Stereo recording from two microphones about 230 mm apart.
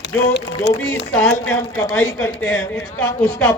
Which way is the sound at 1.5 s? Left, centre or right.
Centre.